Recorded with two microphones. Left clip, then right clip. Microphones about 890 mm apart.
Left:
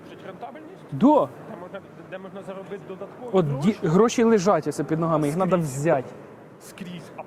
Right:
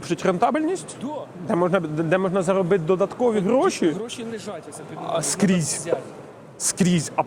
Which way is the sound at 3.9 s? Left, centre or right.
Left.